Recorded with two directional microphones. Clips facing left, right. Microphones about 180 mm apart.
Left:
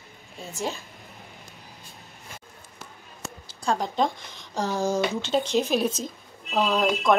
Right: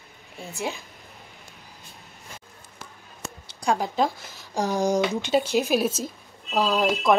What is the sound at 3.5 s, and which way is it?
Speech, 15° right (ahead or behind).